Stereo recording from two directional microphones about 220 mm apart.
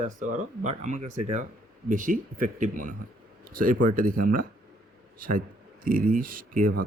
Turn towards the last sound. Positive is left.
turn(degrees=-40)  # may be behind; listen again after turning